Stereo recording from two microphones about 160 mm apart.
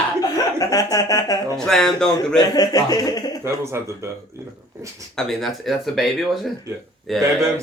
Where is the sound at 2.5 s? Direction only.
25° left (ahead or behind).